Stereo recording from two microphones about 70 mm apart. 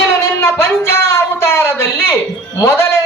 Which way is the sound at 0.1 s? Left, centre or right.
Left.